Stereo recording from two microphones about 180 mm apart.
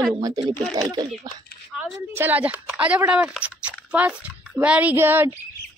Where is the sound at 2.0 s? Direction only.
10° right (ahead or behind).